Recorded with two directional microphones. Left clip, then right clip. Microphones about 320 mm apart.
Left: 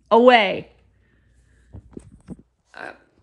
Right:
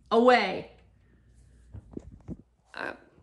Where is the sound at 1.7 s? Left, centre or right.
Centre.